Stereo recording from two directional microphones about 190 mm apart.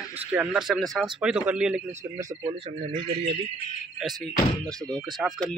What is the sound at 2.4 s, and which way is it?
Speech, 30° right (ahead or behind).